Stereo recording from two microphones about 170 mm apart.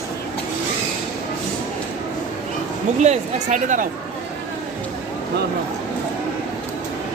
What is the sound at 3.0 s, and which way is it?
Speech, 45° right (ahead or behind).